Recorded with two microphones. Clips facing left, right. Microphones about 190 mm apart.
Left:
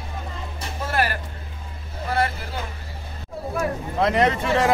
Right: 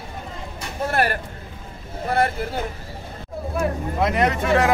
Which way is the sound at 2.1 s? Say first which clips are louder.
Right 3 dB; 50° right (ahead or behind).